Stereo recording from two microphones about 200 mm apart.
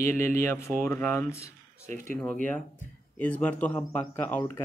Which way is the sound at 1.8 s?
40° right (ahead or behind).